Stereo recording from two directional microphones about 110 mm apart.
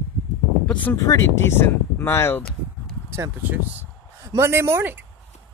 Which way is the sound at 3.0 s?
25° right (ahead or behind).